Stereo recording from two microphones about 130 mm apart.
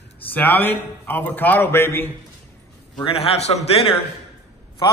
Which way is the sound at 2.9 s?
45° left (ahead or behind).